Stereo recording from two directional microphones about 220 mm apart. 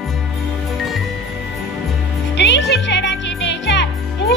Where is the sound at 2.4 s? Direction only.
55° left (ahead or behind).